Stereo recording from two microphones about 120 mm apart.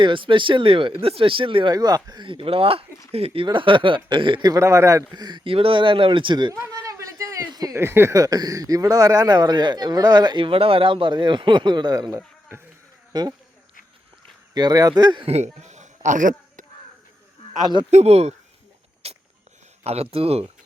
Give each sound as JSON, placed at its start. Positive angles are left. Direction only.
{"t": 0.0, "sound": "speech", "side_deg": -45}
{"t": 1.7, "sound": "speech", "side_deg": -35}
{"t": 4.5, "sound": "speech", "side_deg": -25}
{"t": 6.5, "sound": "speech", "side_deg": -25}
{"t": 14.5, "sound": "speech", "side_deg": -30}
{"t": 15.3, "sound": "a sound", "side_deg": -70}
{"t": 17.9, "sound": "speech", "side_deg": -60}
{"t": 19.0, "sound": "a sound", "side_deg": -55}
{"t": 19.8, "sound": "speech", "side_deg": -60}